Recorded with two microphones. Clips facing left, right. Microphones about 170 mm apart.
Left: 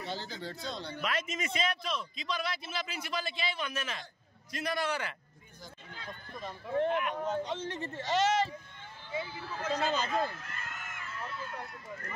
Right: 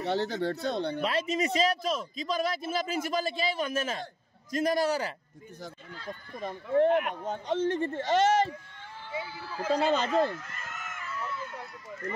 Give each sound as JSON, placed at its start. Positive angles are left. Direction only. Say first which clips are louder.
{"t": 0.0, "sound": "speech", "louder": "right 10 dB", "side_deg": -70}
{"t": 1.0, "sound": "a man's voice", "louder": "right 4 dB", "side_deg": -35}
{"t": 6.4, "sound": "a man's voice", "louder": "right 7 dB", "side_deg": -50}
{"t": 9.8, "sound": "speech", "louder": "right 6 dB", "side_deg": -65}
{"t": 10.4, "sound": "a sound", "louder": "right 2 dB", "side_deg": 55}